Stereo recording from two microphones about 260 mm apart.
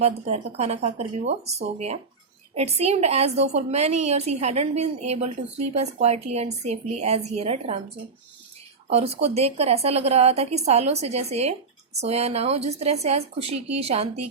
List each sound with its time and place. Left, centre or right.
0.0 s a woman's voice: right
8.9 s a woman's voice: right